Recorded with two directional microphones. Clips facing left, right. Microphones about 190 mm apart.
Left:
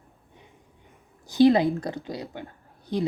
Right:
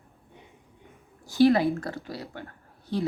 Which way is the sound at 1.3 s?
20° left (ahead or behind).